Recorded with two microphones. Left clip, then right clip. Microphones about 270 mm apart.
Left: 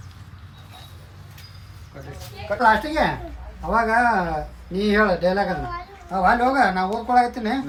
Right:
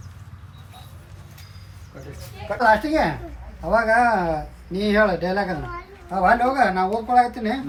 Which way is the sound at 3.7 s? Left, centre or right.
Right.